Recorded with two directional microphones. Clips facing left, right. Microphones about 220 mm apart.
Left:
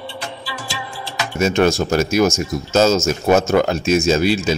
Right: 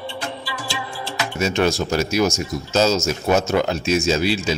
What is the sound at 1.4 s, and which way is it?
A man's voice, 50° left (ahead or behind).